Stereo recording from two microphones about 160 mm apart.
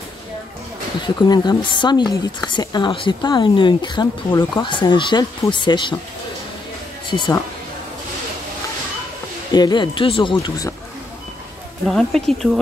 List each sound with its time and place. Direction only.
1.0 s speech: 25° left (ahead or behind)
7.1 s speech: 30° left (ahead or behind)
9.5 s speech: 25° left (ahead or behind)
11.9 s speech: 5° left (ahead or behind)